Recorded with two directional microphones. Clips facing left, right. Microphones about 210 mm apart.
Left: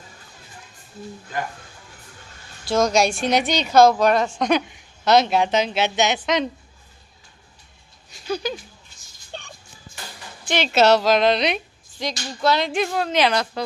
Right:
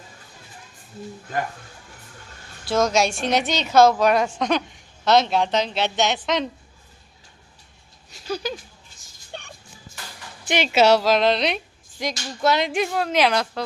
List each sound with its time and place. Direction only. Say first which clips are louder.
2.6 s a woman's voice: left 1 dB; 5° right (ahead or behind)
8.1 s a sound: left 2 dB; 5° right (ahead or behind)
10.4 s a woman's voice: even; 10° right (ahead or behind)
12.4 s a woman's voice: even; 20° right (ahead or behind); by 13.6 s 5° right (ahead or behind)